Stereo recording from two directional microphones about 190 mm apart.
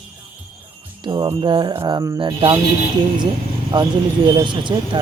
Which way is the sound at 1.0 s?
25° right (ahead or behind).